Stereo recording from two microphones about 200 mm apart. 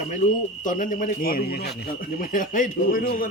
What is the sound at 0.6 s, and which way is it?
A man's voice, 40° left (ahead or behind).